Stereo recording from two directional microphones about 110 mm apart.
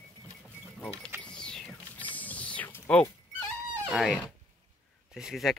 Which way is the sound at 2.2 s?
15° left (ahead or behind).